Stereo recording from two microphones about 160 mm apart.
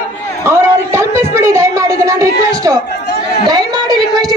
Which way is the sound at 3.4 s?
25° right (ahead or behind).